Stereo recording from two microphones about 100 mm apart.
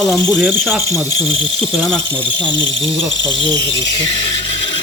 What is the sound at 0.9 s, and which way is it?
Speech, 35° left (ahead or behind).